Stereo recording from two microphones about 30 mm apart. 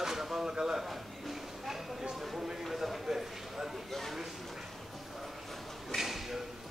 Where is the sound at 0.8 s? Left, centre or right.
Centre.